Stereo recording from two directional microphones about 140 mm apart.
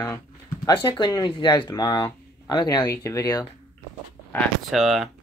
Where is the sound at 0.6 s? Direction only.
35° left (ahead or behind).